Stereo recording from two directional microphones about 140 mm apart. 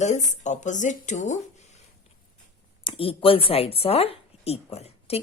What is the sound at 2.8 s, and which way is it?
A woman's voice, 40° left (ahead or behind).